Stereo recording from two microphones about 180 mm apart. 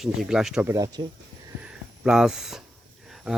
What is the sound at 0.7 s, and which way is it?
Speech, 20° right (ahead or behind).